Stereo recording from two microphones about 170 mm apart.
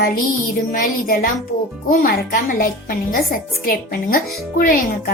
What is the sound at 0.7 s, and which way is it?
A woman's voice, 55° left (ahead or behind).